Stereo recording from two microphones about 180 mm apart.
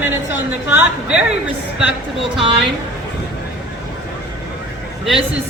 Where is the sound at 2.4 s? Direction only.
30° right (ahead or behind).